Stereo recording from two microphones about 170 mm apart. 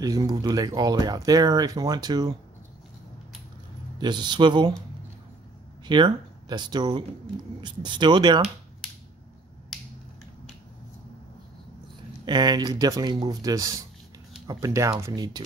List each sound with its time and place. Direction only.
0.0 s speech: 20° right (ahead or behind)
4.0 s speech: 25° right (ahead or behind)
5.9 s speech: 25° right (ahead or behind)
9.7 s finger snapping: centre (ahead or behind)
12.3 s speech: 25° right (ahead or behind)